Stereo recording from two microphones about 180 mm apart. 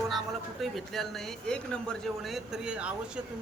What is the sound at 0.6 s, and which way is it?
Speech, centre (ahead or behind).